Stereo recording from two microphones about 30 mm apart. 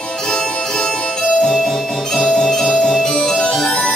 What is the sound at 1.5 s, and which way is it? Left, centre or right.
Music, centre.